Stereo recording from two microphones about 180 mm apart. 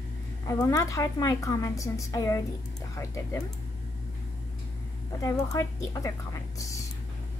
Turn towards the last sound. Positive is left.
turn(degrees=15)  # may be behind; listen again after turning